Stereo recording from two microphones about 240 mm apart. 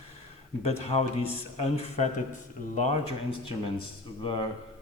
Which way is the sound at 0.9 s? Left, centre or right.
Left.